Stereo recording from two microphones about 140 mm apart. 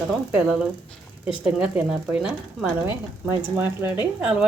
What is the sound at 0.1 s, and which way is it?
A woman's voice, 5° right (ahead or behind).